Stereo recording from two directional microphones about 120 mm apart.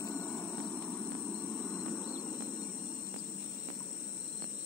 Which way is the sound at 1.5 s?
Centre (ahead or behind).